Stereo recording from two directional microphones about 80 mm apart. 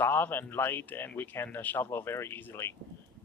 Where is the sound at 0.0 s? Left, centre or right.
Left.